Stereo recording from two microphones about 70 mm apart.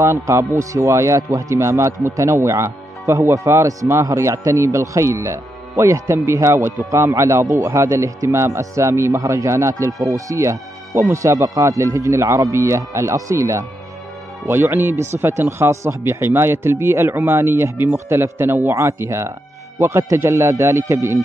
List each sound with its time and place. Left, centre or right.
0.0 s speech: right
3.6 s speech: right
14.5 s speech: right